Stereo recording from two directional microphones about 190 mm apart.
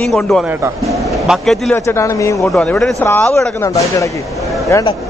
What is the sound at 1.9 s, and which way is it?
Speech, 15° left (ahead or behind).